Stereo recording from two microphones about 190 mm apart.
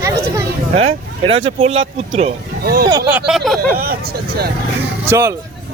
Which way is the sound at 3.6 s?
50° right (ahead or behind).